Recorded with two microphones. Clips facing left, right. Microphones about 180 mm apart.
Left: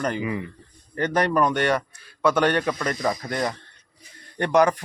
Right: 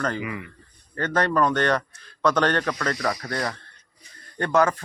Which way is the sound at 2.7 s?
20° left (ahead or behind).